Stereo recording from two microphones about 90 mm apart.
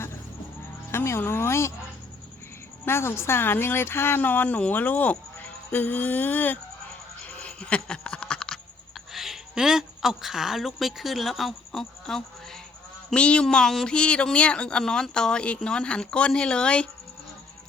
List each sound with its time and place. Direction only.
0.9 s speech: 30° left (ahead or behind)
2.8 s speech: 25° left (ahead or behind)
7.3 s a sound: 15° left (ahead or behind)
9.1 s speech: 5° right (ahead or behind)